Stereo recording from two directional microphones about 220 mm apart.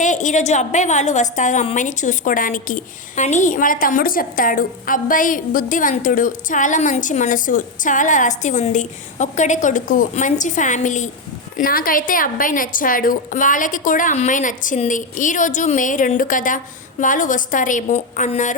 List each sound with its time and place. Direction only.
0.0 s a woman's voice: 35° left (ahead or behind)